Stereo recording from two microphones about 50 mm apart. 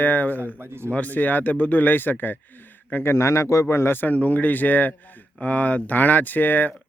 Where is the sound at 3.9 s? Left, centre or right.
Left.